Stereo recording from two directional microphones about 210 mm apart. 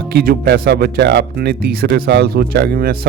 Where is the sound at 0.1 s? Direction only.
45° right (ahead or behind).